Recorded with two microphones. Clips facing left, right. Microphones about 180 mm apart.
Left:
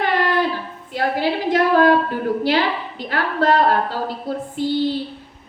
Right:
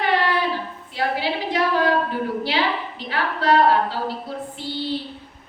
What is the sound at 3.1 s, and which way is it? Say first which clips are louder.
Speech: left 2 dB; 50° left (ahead or behind).